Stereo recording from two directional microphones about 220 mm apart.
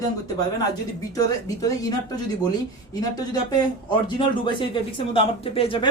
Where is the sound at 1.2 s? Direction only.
15° left (ahead or behind).